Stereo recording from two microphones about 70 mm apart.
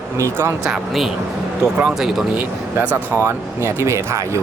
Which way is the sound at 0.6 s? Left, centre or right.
Centre.